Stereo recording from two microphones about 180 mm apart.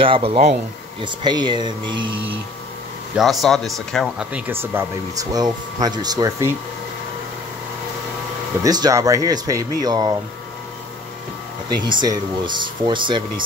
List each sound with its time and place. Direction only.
0.0 s speech: 30° right (ahead or behind)
1.0 s speech: 25° right (ahead or behind)
3.2 s speech: centre (ahead or behind); by 6.5 s 20° right (ahead or behind)
8.6 s speech: 20° right (ahead or behind)
11.7 s speech: 25° right (ahead or behind)